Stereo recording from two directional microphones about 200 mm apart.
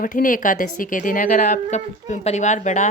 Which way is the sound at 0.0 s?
40° left (ahead or behind).